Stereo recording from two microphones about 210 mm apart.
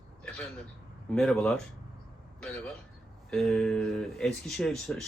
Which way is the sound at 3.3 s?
Centre (ahead or behind).